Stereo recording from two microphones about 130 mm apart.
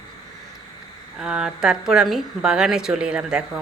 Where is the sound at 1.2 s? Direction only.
5° right (ahead or behind).